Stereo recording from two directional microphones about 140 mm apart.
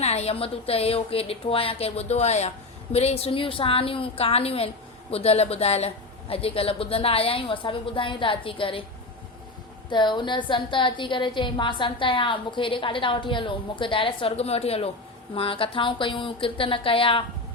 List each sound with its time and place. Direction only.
0.0 s a woman's voice: 50° left (ahead or behind)
9.9 s a woman's voice: 35° left (ahead or behind)